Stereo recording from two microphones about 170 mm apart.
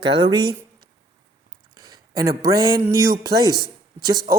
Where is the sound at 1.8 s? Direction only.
20° right (ahead or behind).